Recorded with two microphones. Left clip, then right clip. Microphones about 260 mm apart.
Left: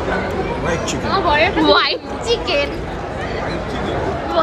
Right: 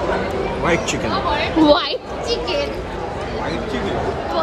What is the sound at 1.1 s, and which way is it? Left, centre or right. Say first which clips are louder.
Speech: left 8 dB; left.